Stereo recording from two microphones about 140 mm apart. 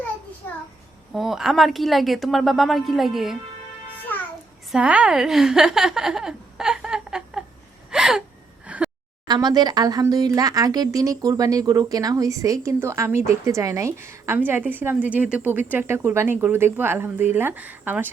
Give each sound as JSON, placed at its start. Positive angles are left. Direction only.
{"t": 1.1, "sound": "speech", "side_deg": 0}
{"t": 4.1, "sound": "babbling", "side_deg": 15}
{"t": 4.7, "sound": "a woman's voice", "side_deg": -10}
{"t": 7.9, "sound": "gasp", "side_deg": -5}
{"t": 8.6, "sound": "a sound", "side_deg": -10}
{"t": 9.2, "sound": "speech", "side_deg": -30}